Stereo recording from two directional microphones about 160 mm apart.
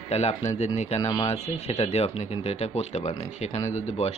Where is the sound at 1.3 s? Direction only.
40° left (ahead or behind).